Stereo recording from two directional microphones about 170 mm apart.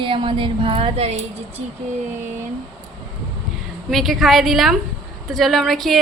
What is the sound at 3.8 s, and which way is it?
A woman's voice, centre (ahead or behind).